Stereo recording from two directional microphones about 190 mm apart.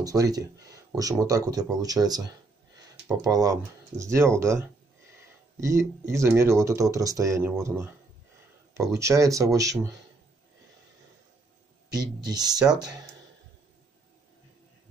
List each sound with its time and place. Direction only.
0.0 s speech: 20° right (ahead or behind)
8.9 s speech: 15° right (ahead or behind)
11.9 s speech: 20° right (ahead or behind)